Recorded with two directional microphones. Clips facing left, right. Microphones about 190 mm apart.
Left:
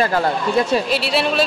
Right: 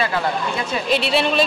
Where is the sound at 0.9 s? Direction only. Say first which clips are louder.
Even; 5° left (ahead or behind).